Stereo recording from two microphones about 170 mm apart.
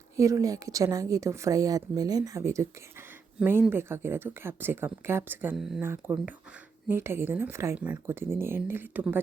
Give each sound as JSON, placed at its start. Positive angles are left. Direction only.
{"t": 0.2, "sound": "a woman's voice", "side_deg": -20}
{"t": 5.8, "sound": "speech", "side_deg": -15}